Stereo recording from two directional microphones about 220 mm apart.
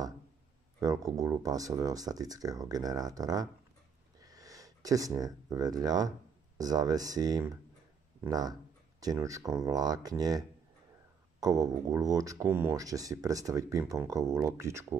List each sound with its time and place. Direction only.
0.7 s speech: 15° right (ahead or behind)